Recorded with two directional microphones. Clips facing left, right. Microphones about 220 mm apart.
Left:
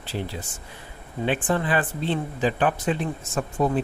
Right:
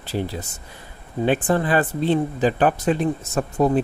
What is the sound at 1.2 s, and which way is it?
Speech, 40° right (ahead or behind).